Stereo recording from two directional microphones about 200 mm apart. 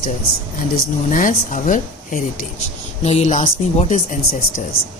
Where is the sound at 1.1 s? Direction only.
40° left (ahead or behind).